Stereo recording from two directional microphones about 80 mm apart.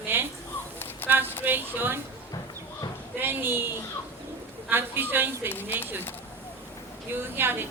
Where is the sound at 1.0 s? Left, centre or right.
Left.